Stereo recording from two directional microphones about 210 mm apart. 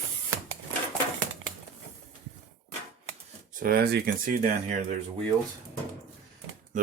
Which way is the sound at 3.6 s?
45° right (ahead or behind).